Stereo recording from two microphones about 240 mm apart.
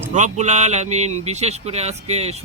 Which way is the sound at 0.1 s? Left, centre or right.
Right.